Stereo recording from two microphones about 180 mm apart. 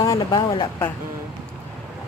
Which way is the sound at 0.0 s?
20° left (ahead or behind).